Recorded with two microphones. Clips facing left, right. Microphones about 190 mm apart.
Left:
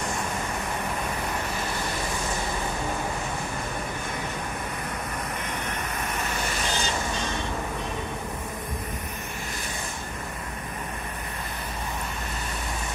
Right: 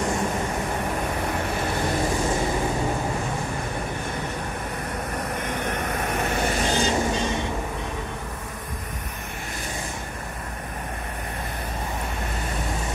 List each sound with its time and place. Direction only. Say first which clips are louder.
5.5 s vehicle: right 5 dB; 55° right (ahead or behind)